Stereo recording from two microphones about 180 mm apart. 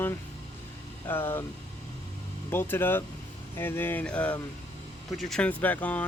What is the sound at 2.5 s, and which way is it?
Speech, 10° left (ahead or behind).